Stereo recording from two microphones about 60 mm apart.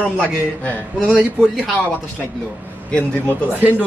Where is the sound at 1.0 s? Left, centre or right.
Centre.